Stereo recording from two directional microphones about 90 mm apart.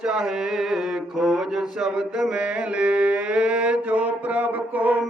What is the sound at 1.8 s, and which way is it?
Mantra, 5° right (ahead or behind).